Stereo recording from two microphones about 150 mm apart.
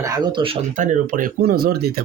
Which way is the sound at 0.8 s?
65° right (ahead or behind).